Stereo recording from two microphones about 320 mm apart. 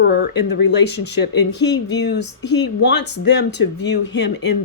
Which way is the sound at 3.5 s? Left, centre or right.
Left.